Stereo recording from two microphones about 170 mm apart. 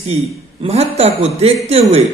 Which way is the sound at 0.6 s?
35° right (ahead or behind).